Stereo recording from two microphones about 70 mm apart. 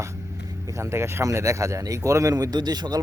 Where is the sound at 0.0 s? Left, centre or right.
Right.